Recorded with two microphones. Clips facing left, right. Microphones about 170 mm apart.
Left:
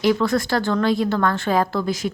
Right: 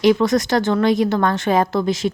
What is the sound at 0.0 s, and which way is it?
A woman's voice, 20° right (ahead or behind).